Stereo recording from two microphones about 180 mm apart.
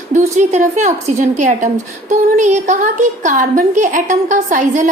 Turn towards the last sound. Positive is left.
turn(degrees=-45)  # may be behind; listen again after turning